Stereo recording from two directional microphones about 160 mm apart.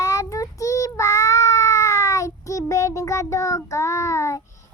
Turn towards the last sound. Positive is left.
turn(degrees=20)  # may be behind; listen again after turning